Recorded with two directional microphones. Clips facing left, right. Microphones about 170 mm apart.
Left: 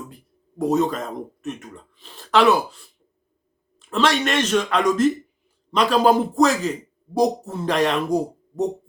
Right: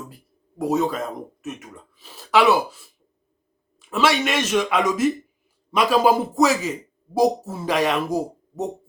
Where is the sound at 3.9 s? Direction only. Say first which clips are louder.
Even; 5° right (ahead or behind).